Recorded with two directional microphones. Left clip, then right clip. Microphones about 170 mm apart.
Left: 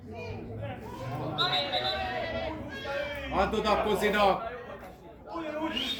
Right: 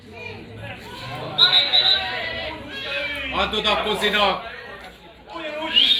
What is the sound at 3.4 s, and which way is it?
Speech, 35° left (ahead or behind).